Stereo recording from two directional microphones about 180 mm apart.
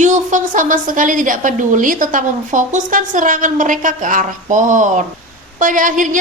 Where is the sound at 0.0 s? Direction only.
45° right (ahead or behind).